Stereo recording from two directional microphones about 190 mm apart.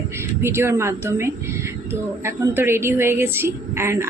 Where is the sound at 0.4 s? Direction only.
15° right (ahead or behind).